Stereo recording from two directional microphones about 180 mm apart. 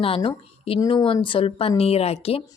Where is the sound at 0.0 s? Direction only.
30° left (ahead or behind).